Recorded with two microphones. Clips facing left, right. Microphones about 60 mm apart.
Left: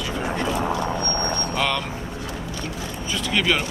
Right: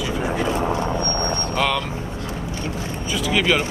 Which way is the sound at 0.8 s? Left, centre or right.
Right.